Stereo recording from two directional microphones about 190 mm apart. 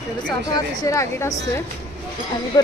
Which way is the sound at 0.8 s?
15° left (ahead or behind).